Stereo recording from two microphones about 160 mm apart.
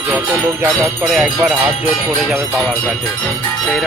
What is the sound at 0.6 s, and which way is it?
Speech, 20° right (ahead or behind).